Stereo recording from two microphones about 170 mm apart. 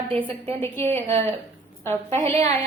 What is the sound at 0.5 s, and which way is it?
Speech, 15° left (ahead or behind).